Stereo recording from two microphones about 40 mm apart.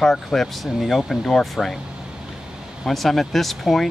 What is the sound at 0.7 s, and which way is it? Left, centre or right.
Speech, centre.